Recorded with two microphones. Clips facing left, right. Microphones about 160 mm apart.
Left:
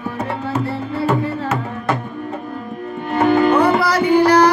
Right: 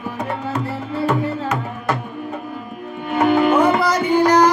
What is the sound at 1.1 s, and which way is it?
Music, centre (ahead or behind).